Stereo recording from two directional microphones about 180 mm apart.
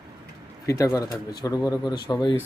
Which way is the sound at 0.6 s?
15° left (ahead or behind).